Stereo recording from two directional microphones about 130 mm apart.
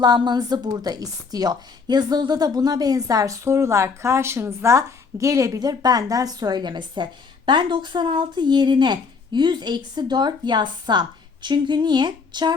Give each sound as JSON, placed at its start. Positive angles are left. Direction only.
{"t": 0.0, "sound": "a woman's voice", "side_deg": -35}